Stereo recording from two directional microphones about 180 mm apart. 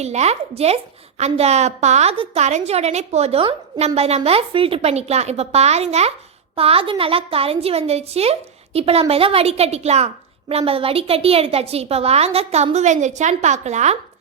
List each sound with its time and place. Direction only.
0.0 s a woman's voice: 40° right (ahead or behind)